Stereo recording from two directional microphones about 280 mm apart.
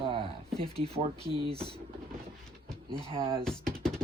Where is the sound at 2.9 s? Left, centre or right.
Centre.